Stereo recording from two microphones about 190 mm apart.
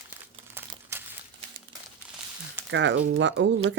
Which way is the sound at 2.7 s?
75° right (ahead or behind).